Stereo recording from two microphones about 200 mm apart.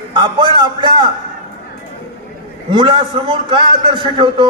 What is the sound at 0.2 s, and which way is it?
Speech, 25° right (ahead or behind).